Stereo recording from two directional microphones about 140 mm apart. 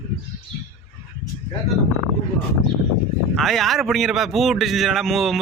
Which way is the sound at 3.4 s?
Centre (ahead or behind).